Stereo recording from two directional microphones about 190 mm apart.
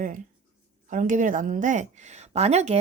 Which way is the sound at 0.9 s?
45° right (ahead or behind).